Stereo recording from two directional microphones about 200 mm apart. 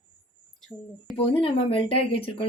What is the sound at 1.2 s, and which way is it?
Speech, 30° left (ahead or behind).